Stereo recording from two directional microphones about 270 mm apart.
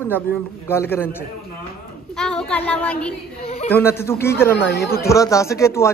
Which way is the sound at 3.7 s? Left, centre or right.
Centre.